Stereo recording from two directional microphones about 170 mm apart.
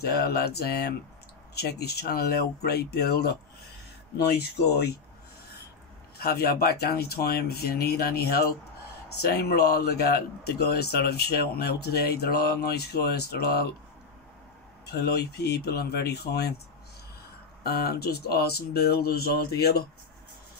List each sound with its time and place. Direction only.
0.0 s speech: 65° left (ahead or behind)
6.1 s speech: 65° left (ahead or behind)
14.9 s speech: 70° left (ahead or behind)
17.6 s speech: 70° left (ahead or behind)